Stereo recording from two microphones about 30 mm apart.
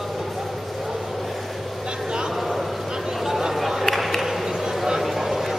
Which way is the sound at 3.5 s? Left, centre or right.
Centre.